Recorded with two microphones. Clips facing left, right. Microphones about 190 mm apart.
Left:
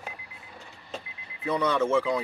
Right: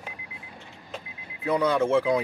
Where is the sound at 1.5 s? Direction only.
10° right (ahead or behind).